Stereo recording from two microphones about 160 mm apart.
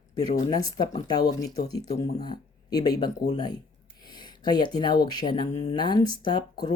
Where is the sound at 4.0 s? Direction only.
25° left (ahead or behind).